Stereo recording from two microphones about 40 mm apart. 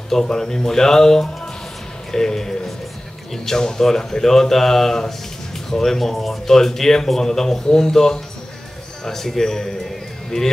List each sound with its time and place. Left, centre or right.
0.1 s a man's voice: centre